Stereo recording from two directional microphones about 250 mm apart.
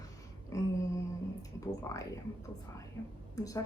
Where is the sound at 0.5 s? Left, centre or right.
Centre.